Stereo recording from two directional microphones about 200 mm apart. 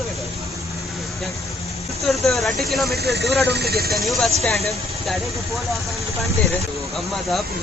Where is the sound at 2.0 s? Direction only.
Centre (ahead or behind).